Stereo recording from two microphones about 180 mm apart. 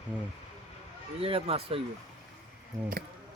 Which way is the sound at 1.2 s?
30° right (ahead or behind).